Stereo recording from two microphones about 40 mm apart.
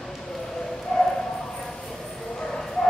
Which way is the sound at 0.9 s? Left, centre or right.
Centre.